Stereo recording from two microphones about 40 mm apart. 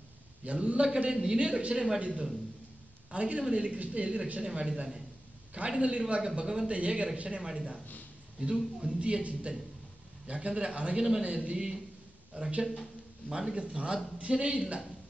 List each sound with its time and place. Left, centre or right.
0.5 s a woman's voice: right; by 8.9 s centre
9.2 s a woman's voice: right
11.5 s a man's voice: centre
12.4 s a woman's voice: right
13.3 s a man's voice: centre